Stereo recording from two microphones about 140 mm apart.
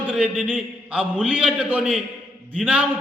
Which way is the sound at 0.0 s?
10° right (ahead or behind).